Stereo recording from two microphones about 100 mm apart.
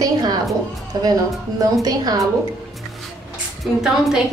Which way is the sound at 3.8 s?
5° right (ahead or behind).